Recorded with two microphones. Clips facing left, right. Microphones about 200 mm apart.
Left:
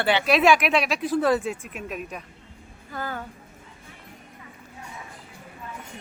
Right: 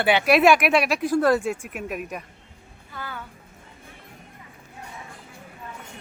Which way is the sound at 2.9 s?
45° left (ahead or behind).